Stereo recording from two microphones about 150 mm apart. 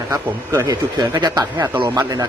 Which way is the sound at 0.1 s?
20° right (ahead or behind).